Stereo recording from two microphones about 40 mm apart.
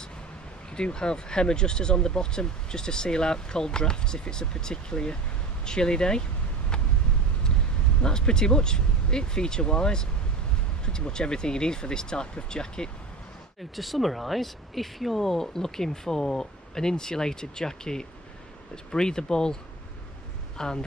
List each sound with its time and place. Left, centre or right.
0.7 s speech: left
8.0 s speech: left
13.7 s speech: centre